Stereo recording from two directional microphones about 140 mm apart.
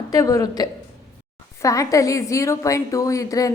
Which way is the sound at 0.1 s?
25° left (ahead or behind).